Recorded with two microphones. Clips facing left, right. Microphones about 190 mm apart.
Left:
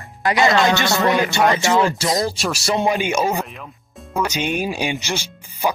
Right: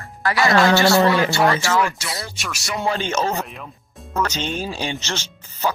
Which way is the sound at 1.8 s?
30° left (ahead or behind).